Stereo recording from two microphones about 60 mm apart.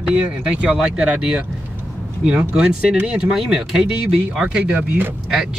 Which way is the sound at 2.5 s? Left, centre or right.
Centre.